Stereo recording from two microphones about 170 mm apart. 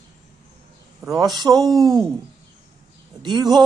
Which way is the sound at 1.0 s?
20° right (ahead or behind).